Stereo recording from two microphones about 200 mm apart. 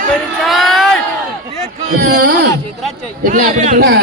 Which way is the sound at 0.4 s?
Centre (ahead or behind).